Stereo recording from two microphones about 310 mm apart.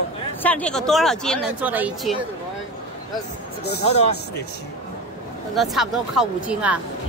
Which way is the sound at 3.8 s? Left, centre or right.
Centre.